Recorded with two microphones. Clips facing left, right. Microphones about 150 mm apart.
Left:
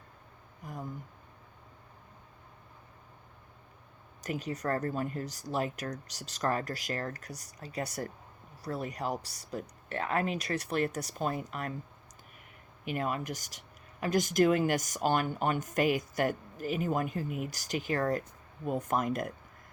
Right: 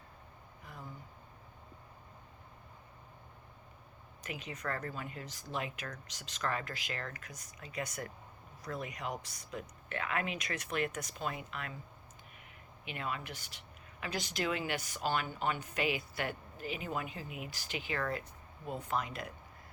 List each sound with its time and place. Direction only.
0.6 s a sound: 40° left (ahead or behind)
4.2 s speech: 40° left (ahead or behind)
12.8 s speech: 45° left (ahead or behind)